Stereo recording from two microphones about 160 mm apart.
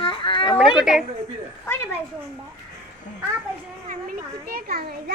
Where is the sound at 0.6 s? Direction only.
5° right (ahead or behind).